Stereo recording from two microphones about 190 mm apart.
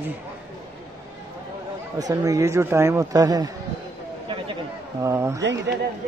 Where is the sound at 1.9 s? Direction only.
20° right (ahead or behind).